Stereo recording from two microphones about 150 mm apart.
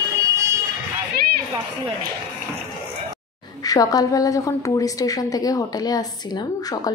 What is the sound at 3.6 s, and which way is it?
A woman's voice, 25° left (ahead or behind).